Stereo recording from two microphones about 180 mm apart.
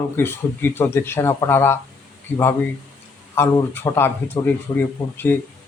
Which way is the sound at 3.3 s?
15° left (ahead or behind).